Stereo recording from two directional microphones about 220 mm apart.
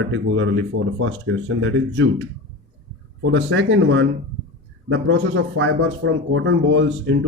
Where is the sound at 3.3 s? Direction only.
60° right (ahead or behind).